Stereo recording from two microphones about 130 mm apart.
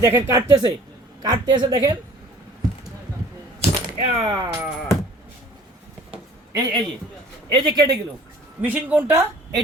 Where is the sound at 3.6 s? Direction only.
55° right (ahead or behind).